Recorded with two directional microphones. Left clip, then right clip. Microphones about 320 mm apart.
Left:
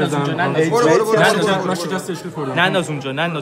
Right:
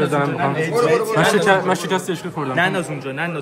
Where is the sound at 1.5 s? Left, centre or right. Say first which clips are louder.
Right 3 dB; right.